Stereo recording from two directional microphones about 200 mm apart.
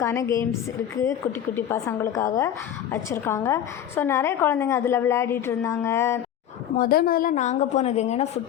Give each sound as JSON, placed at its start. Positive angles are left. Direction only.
{"t": 0.0, "sound": "a woman's voice", "side_deg": 15}
{"t": 1.5, "sound": "a woman's voice", "side_deg": 10}
{"t": 6.7, "sound": "a woman's voice", "side_deg": 45}